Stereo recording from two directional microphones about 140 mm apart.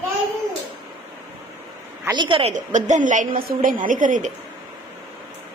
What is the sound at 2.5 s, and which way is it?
A woman's voice, 60° right (ahead or behind).